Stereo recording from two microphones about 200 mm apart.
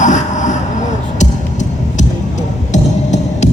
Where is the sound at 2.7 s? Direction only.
35° left (ahead or behind).